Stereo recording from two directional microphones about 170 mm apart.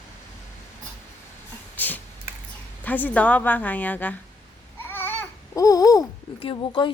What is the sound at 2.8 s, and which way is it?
A woman's voice, 10° left (ahead or behind).